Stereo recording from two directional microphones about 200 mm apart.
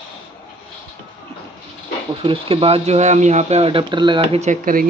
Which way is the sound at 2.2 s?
25° right (ahead or behind).